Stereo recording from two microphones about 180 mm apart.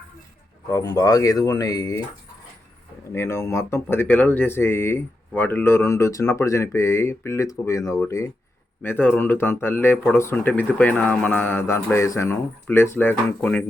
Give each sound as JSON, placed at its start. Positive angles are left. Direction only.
{"t": 0.7, "sound": "speech", "side_deg": 20}
{"t": 3.1, "sound": "speech", "side_deg": 15}